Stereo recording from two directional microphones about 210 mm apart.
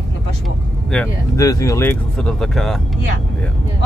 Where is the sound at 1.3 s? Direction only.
15° left (ahead or behind).